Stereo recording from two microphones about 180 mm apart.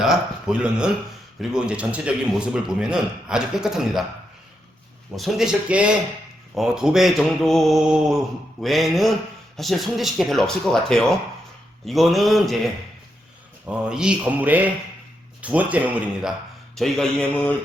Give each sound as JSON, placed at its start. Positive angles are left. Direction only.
{"t": 0.0, "sound": "a man's voice", "side_deg": -5}
{"t": 5.1, "sound": "a man's voice", "side_deg": 0}
{"t": 16.7, "sound": "a man's voice", "side_deg": 0}